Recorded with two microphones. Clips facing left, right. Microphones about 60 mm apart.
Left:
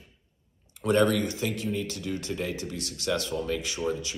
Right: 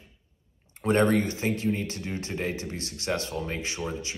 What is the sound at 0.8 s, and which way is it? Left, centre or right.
Speech, right.